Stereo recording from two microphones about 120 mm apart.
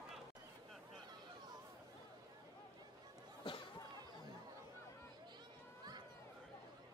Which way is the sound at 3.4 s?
45° left (ahead or behind).